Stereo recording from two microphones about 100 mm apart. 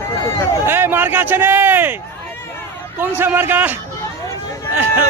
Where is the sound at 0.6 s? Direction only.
20° right (ahead or behind).